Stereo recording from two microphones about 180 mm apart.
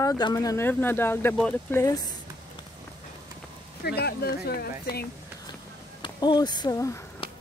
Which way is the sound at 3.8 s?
60° left (ahead or behind).